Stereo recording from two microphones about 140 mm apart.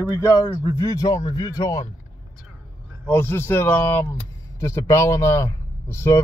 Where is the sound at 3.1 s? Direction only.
15° left (ahead or behind).